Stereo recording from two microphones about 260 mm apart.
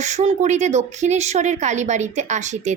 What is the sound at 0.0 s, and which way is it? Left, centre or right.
A woman's voice, right.